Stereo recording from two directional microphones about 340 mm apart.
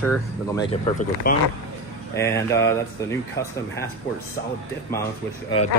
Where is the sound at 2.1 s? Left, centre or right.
Centre.